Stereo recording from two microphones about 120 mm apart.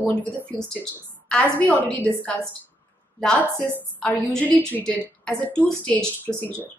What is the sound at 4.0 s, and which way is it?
A woman's voice, 10° left (ahead or behind).